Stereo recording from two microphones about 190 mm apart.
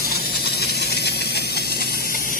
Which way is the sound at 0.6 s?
60° left (ahead or behind).